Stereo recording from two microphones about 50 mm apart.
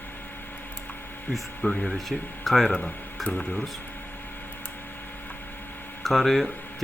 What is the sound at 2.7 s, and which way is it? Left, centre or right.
Speech, left.